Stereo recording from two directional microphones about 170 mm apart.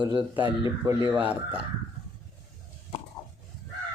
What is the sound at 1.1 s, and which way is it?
Speech, 10° right (ahead or behind).